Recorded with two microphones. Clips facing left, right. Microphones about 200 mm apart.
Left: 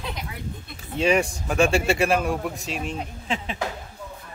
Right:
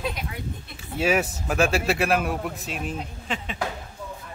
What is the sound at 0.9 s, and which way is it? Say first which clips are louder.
A man's voice: left 2 dB; 5° right (ahead or behind).